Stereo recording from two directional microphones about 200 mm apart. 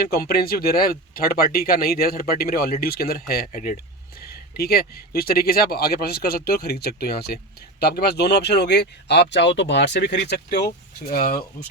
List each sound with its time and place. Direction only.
0.0 s speech: 50° left (ahead or behind)